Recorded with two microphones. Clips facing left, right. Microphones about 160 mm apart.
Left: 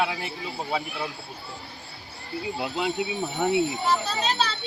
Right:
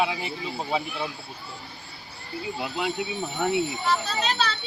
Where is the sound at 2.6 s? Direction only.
20° left (ahead or behind).